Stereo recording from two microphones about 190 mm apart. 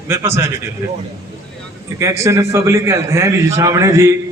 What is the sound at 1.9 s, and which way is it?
A man's voice, 15° right (ahead or behind).